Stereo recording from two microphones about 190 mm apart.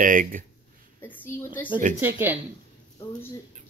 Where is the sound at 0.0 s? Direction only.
45° right (ahead or behind).